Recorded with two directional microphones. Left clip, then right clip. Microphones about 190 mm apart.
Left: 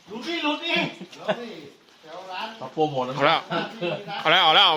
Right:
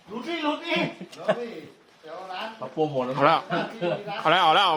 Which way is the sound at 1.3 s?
40° right (ahead or behind).